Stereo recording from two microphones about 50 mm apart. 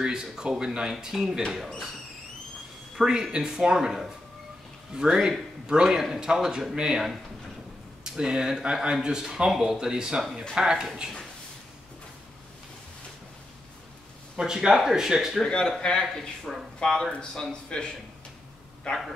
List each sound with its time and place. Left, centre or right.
0.0 s speech: centre
3.0 s speech: centre
14.3 s speech: centre
15.4 s speech: centre